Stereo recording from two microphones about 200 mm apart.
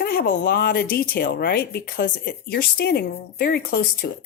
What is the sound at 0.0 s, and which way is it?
Speech, 50° left (ahead or behind).